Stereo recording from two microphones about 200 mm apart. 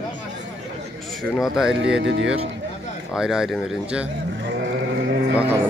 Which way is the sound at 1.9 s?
65° right (ahead or behind).